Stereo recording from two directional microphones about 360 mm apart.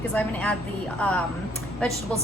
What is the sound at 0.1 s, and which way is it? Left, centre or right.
A woman's voice, centre.